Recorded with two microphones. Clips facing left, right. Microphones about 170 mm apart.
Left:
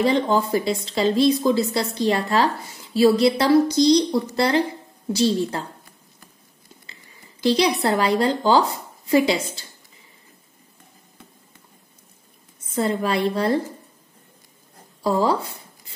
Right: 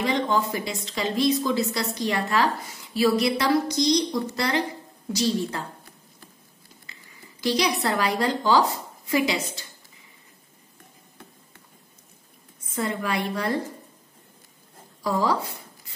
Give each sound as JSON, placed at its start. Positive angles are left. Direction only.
{"t": 0.0, "sound": "speech", "side_deg": 35}
{"t": 6.9, "sound": "speech", "side_deg": 25}
{"t": 12.7, "sound": "speech", "side_deg": 30}
{"t": 15.0, "sound": "speech", "side_deg": 25}